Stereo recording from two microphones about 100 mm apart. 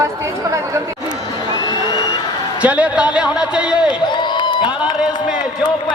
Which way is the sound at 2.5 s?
15° right (ahead or behind).